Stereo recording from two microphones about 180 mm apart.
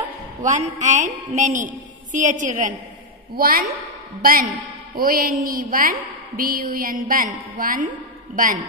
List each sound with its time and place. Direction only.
0.4 s a woman's voice: 40° right (ahead or behind)